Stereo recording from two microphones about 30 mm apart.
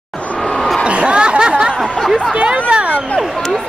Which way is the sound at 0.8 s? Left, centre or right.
Right.